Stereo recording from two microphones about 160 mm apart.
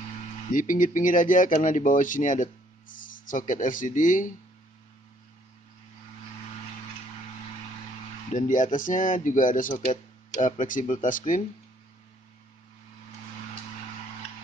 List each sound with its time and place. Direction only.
0.5 s speech: 55° left (ahead or behind)
8.3 s speech: 50° left (ahead or behind)